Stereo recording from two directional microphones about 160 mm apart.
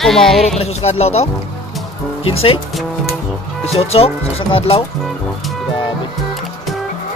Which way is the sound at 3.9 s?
35° left (ahead or behind).